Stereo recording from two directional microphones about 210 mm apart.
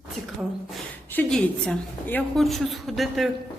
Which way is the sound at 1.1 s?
5° left (ahead or behind).